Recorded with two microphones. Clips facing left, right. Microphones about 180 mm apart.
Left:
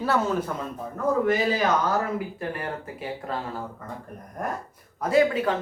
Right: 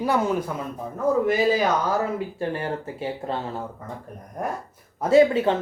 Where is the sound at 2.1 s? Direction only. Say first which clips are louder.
Right 3 dB; 30° right (ahead or behind).